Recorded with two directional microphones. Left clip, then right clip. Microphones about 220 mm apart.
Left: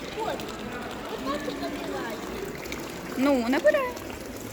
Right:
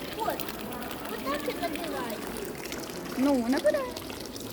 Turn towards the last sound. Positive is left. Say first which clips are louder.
# left 4 dB
turn(degrees=0)  # may be behind; listen again after turning